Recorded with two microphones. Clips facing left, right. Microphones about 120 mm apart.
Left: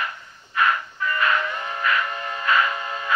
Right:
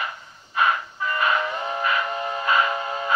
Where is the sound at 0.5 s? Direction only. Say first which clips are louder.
Even; 25° right (ahead or behind).